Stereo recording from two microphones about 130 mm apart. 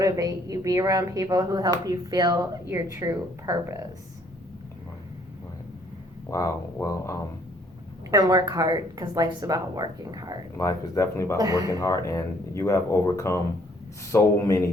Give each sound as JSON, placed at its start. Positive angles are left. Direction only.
{"t": 0.0, "sound": "a woman's voice", "side_deg": -25}
{"t": 6.3, "sound": "speech", "side_deg": 25}
{"t": 8.1, "sound": "a woman's voice", "side_deg": -30}
{"t": 10.6, "sound": "speech", "side_deg": 25}
{"t": 11.3, "sound": "a woman's voice", "side_deg": -25}
{"t": 11.8, "sound": "speech", "side_deg": 25}